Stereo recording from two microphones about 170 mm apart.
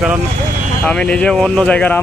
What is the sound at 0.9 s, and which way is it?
Speech, 5° left (ahead or behind).